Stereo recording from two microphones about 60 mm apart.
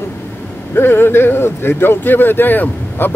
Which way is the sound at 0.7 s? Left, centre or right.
Left.